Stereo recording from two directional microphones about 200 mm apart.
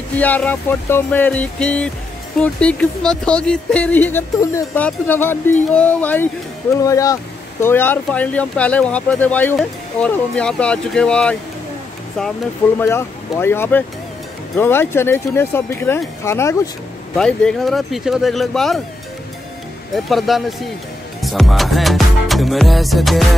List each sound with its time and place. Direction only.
0.1 s speech: 10° left (ahead or behind)
12.7 s speech: 10° left (ahead or behind)
17.2 s music: 5° left (ahead or behind)
19.9 s music: centre (ahead or behind)